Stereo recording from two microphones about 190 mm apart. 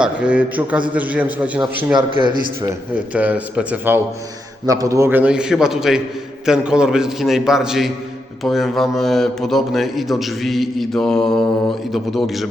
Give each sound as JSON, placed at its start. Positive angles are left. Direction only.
{"t": 0.0, "sound": "a man's voice", "side_deg": -5}
{"t": 2.0, "sound": "speech", "side_deg": -20}
{"t": 3.1, "sound": "a man's voice", "side_deg": -5}